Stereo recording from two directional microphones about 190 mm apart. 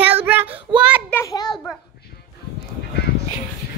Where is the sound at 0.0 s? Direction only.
10° right (ahead or behind).